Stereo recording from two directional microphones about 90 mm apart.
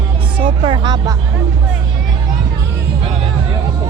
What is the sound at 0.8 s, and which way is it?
Music, 55° right (ahead or behind).